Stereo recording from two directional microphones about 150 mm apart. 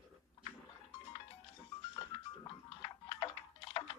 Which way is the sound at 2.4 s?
35° left (ahead or behind).